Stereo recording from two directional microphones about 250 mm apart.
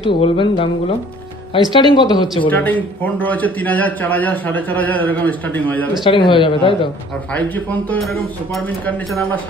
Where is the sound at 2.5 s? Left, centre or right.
Centre.